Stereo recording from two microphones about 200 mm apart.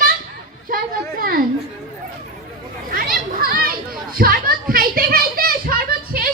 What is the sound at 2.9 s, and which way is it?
Children playing, 45° right (ahead or behind).